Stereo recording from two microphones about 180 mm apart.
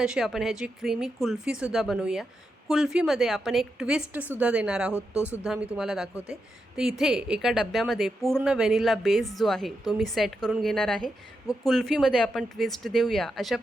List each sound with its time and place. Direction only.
0.0 s a woman's voice: 5° right (ahead or behind)